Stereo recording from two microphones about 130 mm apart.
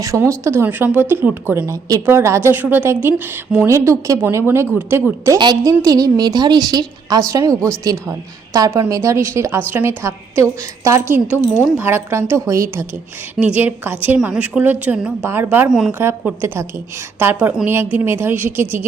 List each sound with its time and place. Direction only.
0.0 s speech: 25° right (ahead or behind)
5.4 s a woman's voice: 35° right (ahead or behind); by 18.9 s 15° right (ahead or behind)